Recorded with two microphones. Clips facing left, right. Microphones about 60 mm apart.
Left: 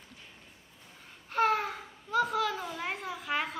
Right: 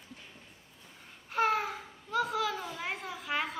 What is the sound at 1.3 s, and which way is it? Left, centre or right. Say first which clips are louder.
A child's voice: left 1 dB; centre.